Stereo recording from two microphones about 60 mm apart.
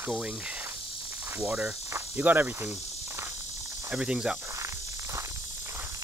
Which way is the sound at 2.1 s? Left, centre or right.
Right.